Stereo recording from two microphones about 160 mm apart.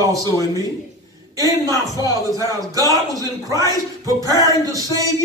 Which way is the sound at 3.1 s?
20° right (ahead or behind).